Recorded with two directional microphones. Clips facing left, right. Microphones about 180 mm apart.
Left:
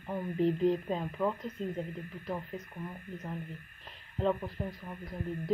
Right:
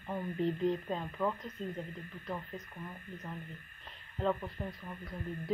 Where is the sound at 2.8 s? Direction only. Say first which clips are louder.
Left 4 dB; 10° left (ahead or behind).